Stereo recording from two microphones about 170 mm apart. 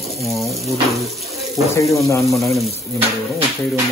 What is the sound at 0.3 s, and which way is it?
Speech, centre (ahead or behind).